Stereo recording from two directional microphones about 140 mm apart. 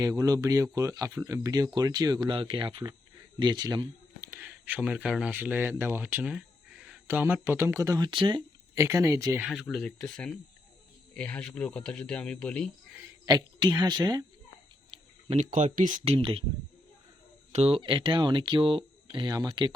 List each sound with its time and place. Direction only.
0.0 s speech: 25° right (ahead or behind)
4.4 s speech: 10° right (ahead or behind)
5.0 s speech: centre (ahead or behind)
5.3 s speech: 10° right (ahead or behind); by 8.4 s 35° right (ahead or behind)
8.7 s speech: 20° right (ahead or behind)
9.5 s speech: centre (ahead or behind)
11.1 s speech: 10° left (ahead or behind)
13.2 s speech: 30° right (ahead or behind)
14.8 s a sound: 45° right (ahead or behind)
15.5 s speech: 65° right (ahead or behind)
17.5 s speech: 45° right (ahead or behind); by 19.7 s 30° right (ahead or behind)